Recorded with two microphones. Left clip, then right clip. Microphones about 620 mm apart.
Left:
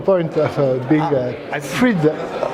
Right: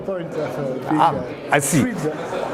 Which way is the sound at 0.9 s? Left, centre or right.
Right.